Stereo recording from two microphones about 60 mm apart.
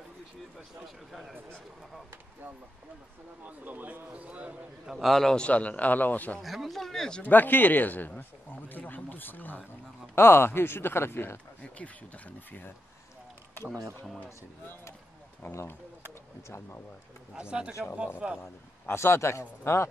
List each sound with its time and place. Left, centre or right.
0.8 s speech: centre
3.4 s a man's voice: right
4.8 s speech: centre
5.4 s a man's voice: left
6.4 s speech: centre
7.2 s speech: left
11.6 s a man's voice: left
15.4 s speech: left
17.3 s speech: centre
18.4 s a man's voice: left